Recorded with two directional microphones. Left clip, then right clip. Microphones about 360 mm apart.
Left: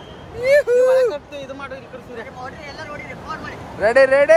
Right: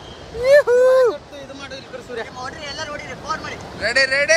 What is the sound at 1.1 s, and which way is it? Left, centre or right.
Speech, left.